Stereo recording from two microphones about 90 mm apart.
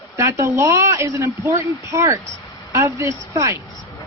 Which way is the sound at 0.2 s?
35° right (ahead or behind).